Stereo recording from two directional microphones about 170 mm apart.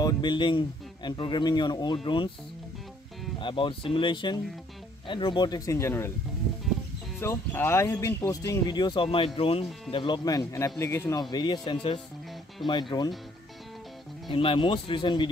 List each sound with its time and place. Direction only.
0.0 s speech: 25° left (ahead or behind)
3.3 s speech: 30° left (ahead or behind)
7.2 s speech: 15° left (ahead or behind)
14.3 s speech: 30° left (ahead or behind)